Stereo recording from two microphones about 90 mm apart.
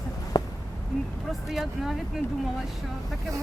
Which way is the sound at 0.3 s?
55° left (ahead or behind).